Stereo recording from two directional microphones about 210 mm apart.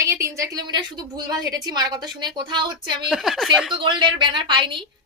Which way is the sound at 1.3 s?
15° right (ahead or behind).